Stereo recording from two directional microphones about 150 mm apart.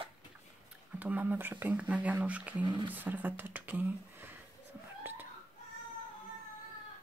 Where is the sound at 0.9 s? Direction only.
10° right (ahead or behind).